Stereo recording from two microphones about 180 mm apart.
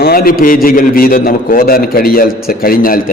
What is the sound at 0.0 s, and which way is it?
A man's voice, 55° left (ahead or behind).